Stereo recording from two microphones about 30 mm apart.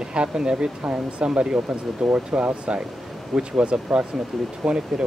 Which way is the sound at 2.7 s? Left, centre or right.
Right.